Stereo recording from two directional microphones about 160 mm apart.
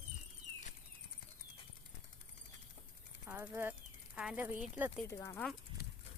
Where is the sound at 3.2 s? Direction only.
10° right (ahead or behind).